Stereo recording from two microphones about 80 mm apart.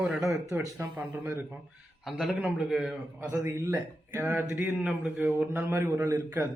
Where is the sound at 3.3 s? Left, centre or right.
Right.